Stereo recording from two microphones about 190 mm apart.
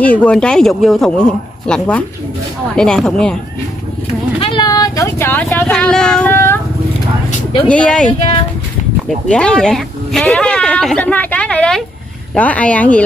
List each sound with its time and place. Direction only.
0.0 s speech: 5° left (ahead or behind)
4.4 s speech: 25° left (ahead or behind)
7.6 s speech: 5° left (ahead or behind)
8.1 s speech: 25° left (ahead or behind)
9.3 s speech: 5° left (ahead or behind)